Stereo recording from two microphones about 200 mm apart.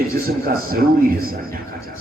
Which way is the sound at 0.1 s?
45° right (ahead or behind).